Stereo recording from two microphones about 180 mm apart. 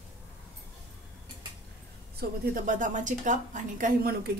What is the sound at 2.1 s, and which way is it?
A woman's voice, 50° right (ahead or behind).